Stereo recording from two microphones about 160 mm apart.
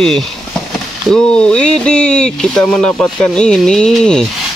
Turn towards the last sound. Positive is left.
turn(degrees=5)  # may be behind; listen again after turning